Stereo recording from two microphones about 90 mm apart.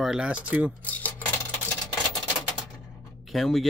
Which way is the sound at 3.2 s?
Centre (ahead or behind).